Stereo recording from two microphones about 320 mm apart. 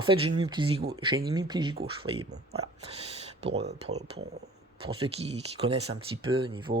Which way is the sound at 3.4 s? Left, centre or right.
Centre.